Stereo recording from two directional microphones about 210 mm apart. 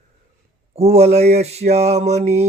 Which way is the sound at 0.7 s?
30° right (ahead or behind).